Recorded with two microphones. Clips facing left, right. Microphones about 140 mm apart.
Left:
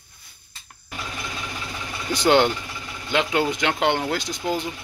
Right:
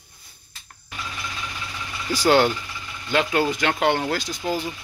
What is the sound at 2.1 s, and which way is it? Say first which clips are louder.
Speech: even; 20° left (ahead or behind).